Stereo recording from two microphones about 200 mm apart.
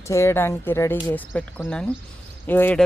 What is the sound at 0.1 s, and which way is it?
A man's voice, 15° left (ahead or behind).